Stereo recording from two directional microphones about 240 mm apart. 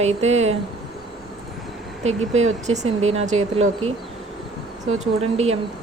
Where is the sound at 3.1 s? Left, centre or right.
Right.